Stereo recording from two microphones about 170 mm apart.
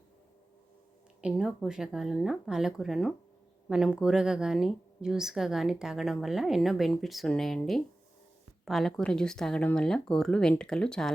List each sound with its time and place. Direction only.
1.2 s a woman's voice: 5° right (ahead or behind)